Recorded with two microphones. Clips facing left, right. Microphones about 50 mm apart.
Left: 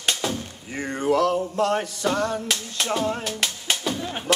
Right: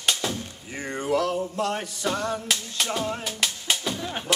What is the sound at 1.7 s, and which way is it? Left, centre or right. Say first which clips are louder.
Music: left 5 dB; left.